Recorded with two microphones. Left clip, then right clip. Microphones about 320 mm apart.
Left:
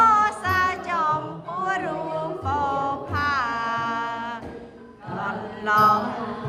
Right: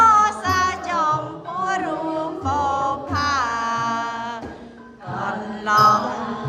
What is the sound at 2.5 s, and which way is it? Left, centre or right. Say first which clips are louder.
Music: right 3 dB; centre.